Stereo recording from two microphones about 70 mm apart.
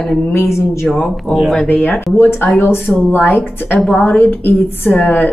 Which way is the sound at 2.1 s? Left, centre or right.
Left.